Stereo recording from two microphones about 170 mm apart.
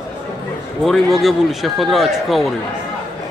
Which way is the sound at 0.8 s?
Centre (ahead or behind).